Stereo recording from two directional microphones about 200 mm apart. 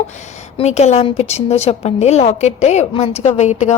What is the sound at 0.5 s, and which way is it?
A woman's voice, 35° left (ahead or behind).